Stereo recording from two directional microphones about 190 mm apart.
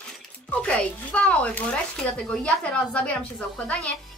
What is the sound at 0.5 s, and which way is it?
A woman's voice, 5° left (ahead or behind).